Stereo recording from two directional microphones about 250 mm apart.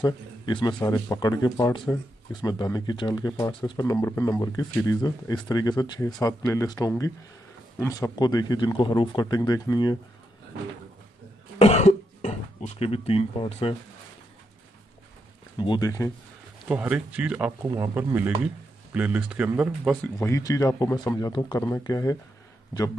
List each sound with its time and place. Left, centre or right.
0.0 s speech: centre
11.5 s cough: left
15.6 s speech: centre
16.6 s a man's voice: centre
20.2 s speech: centre